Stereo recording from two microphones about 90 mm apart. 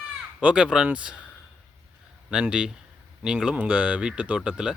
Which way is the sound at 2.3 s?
10° right (ahead or behind).